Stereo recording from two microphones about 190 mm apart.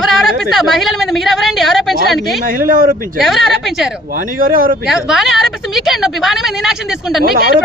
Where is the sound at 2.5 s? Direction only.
45° right (ahead or behind).